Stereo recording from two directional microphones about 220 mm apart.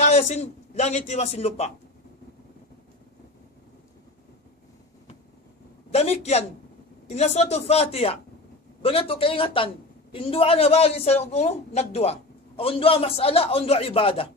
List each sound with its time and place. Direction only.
0.0 s speech: 30° left (ahead or behind)
5.9 s a woman's voice: 30° left (ahead or behind)